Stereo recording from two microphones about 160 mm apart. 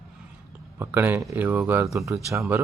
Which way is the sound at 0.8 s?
15° right (ahead or behind).